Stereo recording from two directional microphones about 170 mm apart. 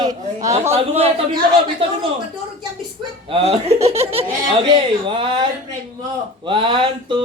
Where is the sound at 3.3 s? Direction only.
35° right (ahead or behind).